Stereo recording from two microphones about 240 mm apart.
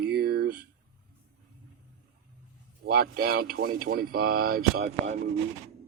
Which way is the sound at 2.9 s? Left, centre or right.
Right.